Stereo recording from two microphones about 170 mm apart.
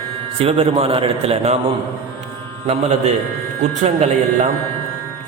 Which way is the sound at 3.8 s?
40° right (ahead or behind).